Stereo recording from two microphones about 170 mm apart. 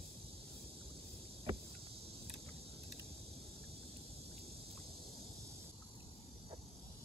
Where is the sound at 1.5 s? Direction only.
35° right (ahead or behind).